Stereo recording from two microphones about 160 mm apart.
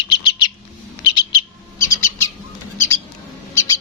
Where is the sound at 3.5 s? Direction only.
20° left (ahead or behind).